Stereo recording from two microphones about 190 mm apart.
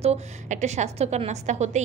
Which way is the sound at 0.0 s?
35° right (ahead or behind).